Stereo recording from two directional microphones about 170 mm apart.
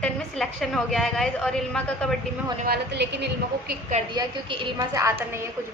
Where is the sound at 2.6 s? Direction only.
75° right (ahead or behind).